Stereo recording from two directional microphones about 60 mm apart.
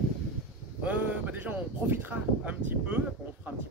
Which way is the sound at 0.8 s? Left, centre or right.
Right.